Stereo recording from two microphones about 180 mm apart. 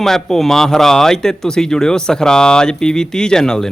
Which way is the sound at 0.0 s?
Centre (ahead or behind).